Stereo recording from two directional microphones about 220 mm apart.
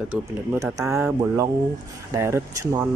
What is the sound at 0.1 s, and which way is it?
Speech, 10° right (ahead or behind).